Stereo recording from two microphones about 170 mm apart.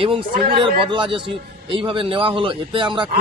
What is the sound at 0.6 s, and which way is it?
A man's voice, 30° right (ahead or behind).